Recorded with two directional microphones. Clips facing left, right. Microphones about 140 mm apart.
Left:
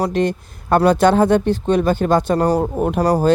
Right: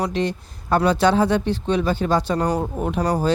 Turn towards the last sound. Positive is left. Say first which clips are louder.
# left 5 dB
turn(degrees=40)  # may be behind; listen again after turning